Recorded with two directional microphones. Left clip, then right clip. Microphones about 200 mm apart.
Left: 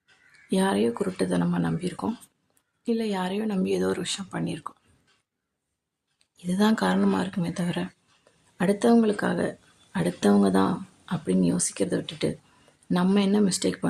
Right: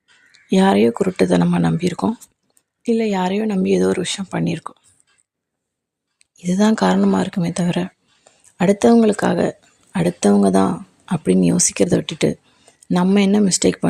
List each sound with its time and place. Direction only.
0.4 s speech: 30° right (ahead or behind)
6.1 s speech: 30° right (ahead or behind)